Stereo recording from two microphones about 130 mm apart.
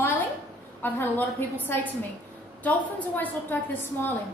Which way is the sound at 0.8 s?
15° left (ahead or behind).